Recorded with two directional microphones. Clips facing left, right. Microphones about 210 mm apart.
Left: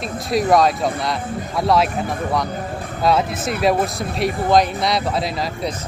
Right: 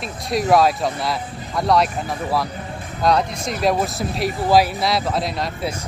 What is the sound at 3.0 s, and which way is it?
Speech, 5° left (ahead or behind).